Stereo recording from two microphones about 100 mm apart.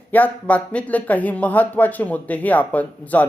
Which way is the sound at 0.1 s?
15° left (ahead or behind).